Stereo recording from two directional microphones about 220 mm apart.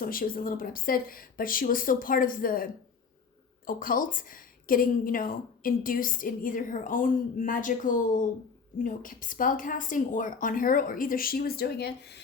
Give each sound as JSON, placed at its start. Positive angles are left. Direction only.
{"t": 0.0, "sound": "a woman's voice", "side_deg": 40}
{"t": 3.7, "sound": "a woman's voice", "side_deg": 40}